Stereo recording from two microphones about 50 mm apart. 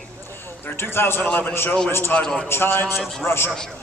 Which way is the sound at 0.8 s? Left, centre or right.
Left.